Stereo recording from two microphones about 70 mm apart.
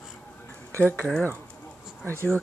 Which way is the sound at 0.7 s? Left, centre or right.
Left.